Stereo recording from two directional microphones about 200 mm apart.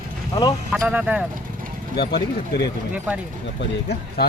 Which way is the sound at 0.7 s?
Centre (ahead or behind).